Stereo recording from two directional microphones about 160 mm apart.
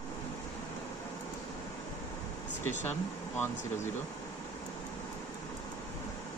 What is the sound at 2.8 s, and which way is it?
Speech, 15° left (ahead or behind).